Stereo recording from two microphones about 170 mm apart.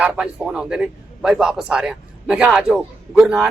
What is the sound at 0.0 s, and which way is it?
A man's voice, 5° right (ahead or behind).